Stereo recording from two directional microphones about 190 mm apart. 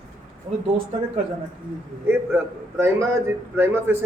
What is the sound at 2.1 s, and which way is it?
A man's voice, 10° right (ahead or behind).